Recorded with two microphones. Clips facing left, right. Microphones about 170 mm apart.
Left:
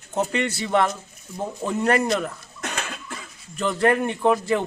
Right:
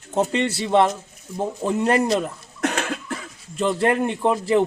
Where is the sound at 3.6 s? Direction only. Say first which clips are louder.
Right 1 dB; 25° right (ahead or behind).